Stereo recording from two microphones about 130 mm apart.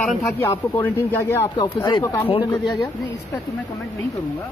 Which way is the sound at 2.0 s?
25° left (ahead or behind).